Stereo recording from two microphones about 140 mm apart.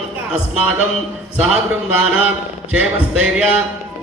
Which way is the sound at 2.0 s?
10° right (ahead or behind).